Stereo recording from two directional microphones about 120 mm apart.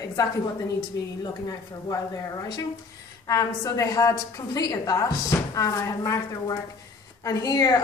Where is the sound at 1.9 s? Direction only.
30° left (ahead or behind).